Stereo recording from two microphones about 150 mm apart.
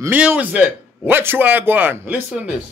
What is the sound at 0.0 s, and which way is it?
A man's voice, 10° right (ahead or behind).